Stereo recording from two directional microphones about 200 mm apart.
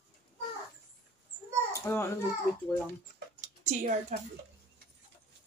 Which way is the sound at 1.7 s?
15° left (ahead or behind).